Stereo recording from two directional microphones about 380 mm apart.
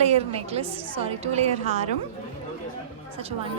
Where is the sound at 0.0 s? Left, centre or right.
Centre.